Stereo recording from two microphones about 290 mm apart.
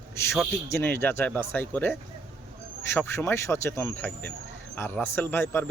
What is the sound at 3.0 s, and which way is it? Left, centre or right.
Speech, centre.